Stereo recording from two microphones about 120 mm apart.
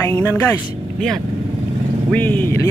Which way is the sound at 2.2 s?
15° left (ahead or behind).